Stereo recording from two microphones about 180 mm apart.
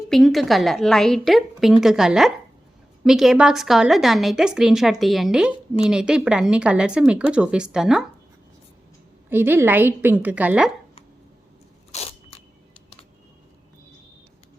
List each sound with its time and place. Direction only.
0.1 s speech: centre (ahead or behind)
9.3 s a woman's voice: 10° right (ahead or behind)
11.9 s biting: 35° left (ahead or behind)